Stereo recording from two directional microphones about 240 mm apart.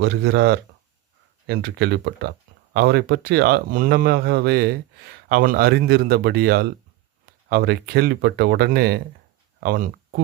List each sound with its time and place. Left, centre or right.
0.0 s speech: right